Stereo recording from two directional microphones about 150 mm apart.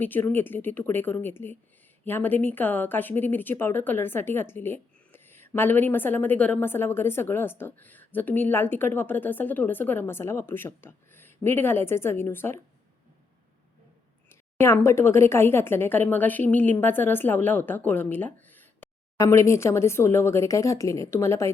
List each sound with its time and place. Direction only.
0.0 s speech: 15° left (ahead or behind)
14.3 s speech: 15° left (ahead or behind)